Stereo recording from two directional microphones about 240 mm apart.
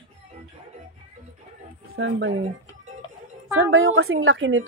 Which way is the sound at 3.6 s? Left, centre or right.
Right.